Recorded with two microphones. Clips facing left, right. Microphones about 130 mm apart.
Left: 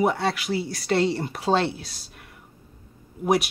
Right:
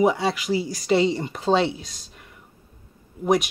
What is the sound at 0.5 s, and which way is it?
Speech, 65° left (ahead or behind).